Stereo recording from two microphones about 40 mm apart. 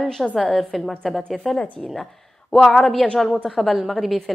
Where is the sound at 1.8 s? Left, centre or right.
Centre.